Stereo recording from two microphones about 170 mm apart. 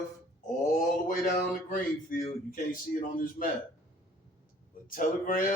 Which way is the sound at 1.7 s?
50° left (ahead or behind).